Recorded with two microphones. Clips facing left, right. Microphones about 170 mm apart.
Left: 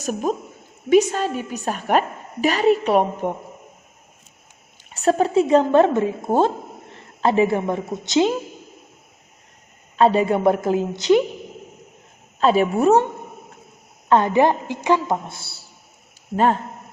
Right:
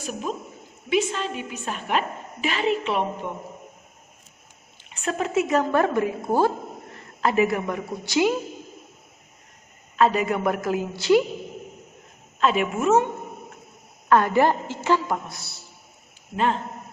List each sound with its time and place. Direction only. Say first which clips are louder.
0.0 s a woman's voice: left 7 dB; 45° left (ahead or behind)
4.9 s a woman's voice: left 7 dB; 35° left (ahead or behind)
10.0 s a woman's voice: left 5 dB; 30° left (ahead or behind)
12.4 s a woman's voice: left 5 dB; 35° left (ahead or behind)
14.1 s a woman's voice: left 2 dB; 20° left (ahead or behind)
16.3 s a woman's voice: left 5 dB; 40° left (ahead or behind)